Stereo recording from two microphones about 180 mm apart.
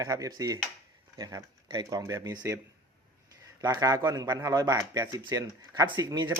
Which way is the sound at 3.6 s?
20° right (ahead or behind).